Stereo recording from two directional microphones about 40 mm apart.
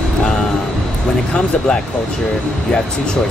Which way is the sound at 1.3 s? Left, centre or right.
Left.